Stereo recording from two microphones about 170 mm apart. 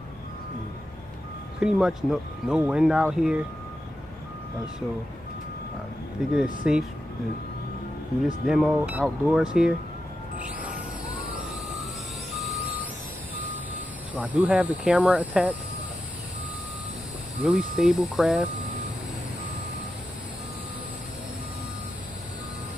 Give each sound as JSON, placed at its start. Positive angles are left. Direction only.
{"t": 1.6, "sound": "speech", "side_deg": -5}
{"t": 6.2, "sound": "speech", "side_deg": 0}
{"t": 8.5, "sound": "speech", "side_deg": -5}
{"t": 14.1, "sound": "speech", "side_deg": -10}
{"t": 17.4, "sound": "speech", "side_deg": -5}